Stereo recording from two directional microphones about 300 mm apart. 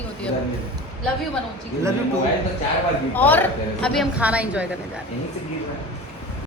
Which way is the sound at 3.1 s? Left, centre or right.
Centre.